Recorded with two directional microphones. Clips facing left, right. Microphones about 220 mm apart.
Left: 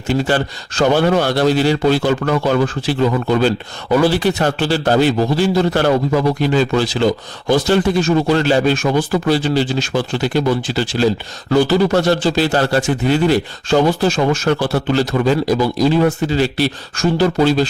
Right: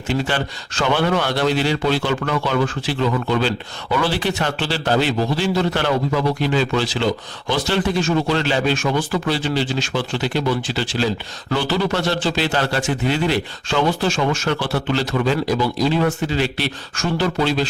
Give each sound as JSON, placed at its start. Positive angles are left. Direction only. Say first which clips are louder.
{"t": 0.1, "sound": "a man's voice", "louder": "left 5 dB", "side_deg": 40}